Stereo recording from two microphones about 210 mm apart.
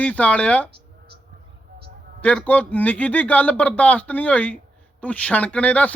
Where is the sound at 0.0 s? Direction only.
5° left (ahead or behind).